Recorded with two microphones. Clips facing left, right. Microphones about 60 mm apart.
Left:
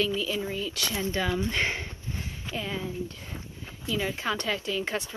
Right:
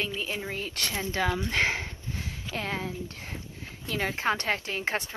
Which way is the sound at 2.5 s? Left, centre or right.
Right.